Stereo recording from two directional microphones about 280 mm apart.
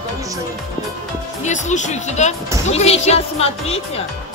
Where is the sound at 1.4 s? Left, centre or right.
Left.